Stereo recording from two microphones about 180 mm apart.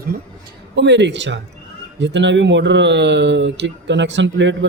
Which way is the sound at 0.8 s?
75° right (ahead or behind).